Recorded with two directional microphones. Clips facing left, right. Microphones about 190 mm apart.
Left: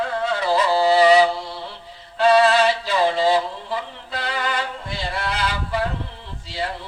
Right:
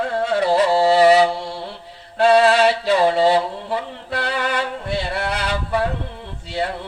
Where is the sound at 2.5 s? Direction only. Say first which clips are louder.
Right 3 dB; 70° right (ahead or behind).